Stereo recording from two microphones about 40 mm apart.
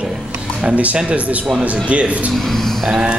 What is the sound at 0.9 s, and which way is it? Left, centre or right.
A man's voice, right.